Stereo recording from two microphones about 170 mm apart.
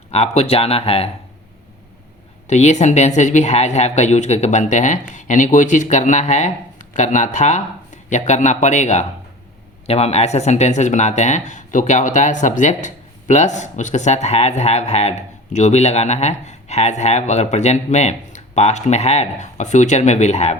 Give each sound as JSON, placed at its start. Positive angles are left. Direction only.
{"t": 0.1, "sound": "speech", "side_deg": 40}
{"t": 2.5, "sound": "speech", "side_deg": 40}